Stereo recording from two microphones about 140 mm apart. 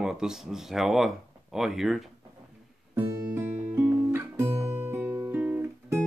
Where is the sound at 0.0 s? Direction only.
5° right (ahead or behind).